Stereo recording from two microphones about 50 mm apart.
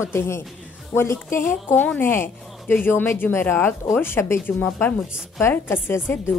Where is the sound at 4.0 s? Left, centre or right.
Left.